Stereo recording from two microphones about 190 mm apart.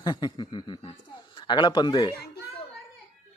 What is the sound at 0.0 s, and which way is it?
Speech, 20° left (ahead or behind).